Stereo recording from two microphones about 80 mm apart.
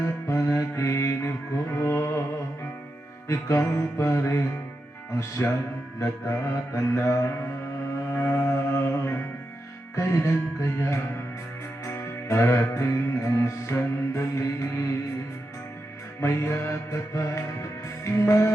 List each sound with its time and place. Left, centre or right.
0.0 s music: left
3.2 s music: left
6.0 s music: left
16.2 s music: left